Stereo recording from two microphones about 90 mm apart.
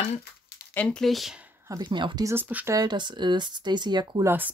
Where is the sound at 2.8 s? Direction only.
60° right (ahead or behind).